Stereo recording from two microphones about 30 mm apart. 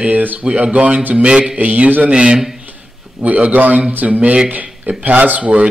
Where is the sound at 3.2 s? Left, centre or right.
Right.